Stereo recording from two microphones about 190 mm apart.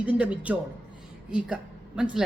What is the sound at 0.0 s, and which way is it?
Speech, 5° right (ahead or behind).